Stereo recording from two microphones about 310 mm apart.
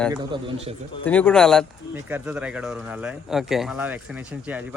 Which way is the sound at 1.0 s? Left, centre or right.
Centre.